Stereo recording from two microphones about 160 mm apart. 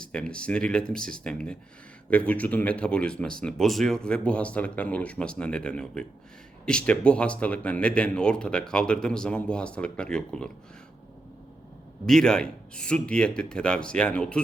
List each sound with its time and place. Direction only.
0.1 s speech: 5° left (ahead or behind)
12.0 s speech: 5° left (ahead or behind)